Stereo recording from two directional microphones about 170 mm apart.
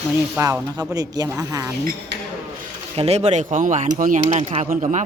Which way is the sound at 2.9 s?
40° right (ahead or behind).